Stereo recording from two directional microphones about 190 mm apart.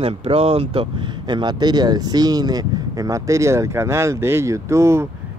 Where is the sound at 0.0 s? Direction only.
30° right (ahead or behind).